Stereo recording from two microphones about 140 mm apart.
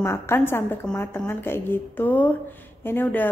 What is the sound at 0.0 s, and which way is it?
Speech, 20° left (ahead or behind).